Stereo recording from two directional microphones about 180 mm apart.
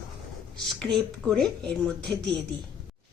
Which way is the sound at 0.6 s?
5° left (ahead or behind).